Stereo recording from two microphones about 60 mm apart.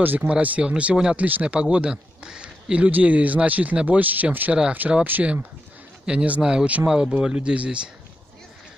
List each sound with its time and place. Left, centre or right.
0.0 s speech: right